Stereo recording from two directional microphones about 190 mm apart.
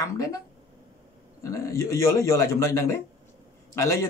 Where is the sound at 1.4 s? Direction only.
15° left (ahead or behind).